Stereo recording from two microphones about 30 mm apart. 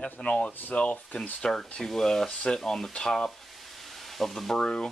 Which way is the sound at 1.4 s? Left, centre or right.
Centre.